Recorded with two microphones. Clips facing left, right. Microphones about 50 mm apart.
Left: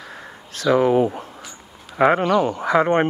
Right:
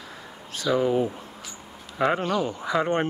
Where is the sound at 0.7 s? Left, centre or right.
Left.